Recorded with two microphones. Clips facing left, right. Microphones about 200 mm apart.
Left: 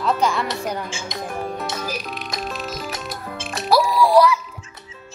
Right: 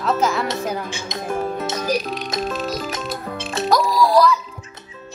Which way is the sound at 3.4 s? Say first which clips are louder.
Right 6 dB; 25° right (ahead or behind).